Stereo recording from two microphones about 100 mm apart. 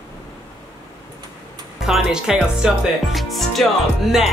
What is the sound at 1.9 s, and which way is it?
Speech, 5° right (ahead or behind).